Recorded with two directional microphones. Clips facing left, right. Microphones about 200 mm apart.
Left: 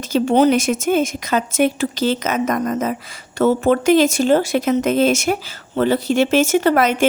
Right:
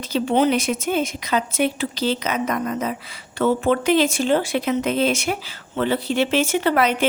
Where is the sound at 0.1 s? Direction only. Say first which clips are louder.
Left 4 dB; 45° left (ahead or behind).